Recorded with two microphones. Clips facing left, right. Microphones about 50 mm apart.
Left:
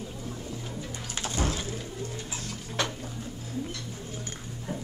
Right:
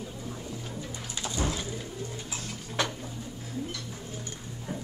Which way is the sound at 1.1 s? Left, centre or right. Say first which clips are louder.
Left 1 dB; left.